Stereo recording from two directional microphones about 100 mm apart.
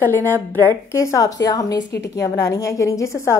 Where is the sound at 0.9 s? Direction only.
30° left (ahead or behind).